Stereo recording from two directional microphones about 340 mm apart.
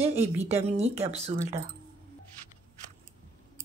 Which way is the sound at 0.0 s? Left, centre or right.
Centre.